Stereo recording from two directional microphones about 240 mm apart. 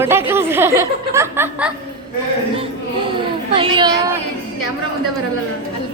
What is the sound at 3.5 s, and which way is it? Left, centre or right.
Speech, right.